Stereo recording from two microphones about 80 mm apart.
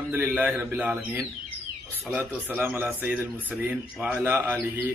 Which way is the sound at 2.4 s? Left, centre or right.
Right.